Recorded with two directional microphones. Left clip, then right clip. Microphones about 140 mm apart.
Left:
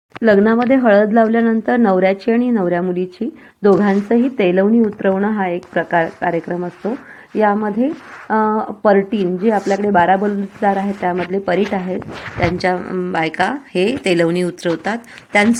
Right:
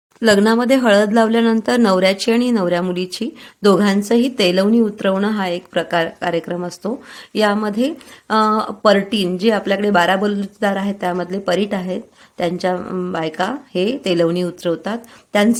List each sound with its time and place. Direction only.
0.2 s speech: 10° right (ahead or behind)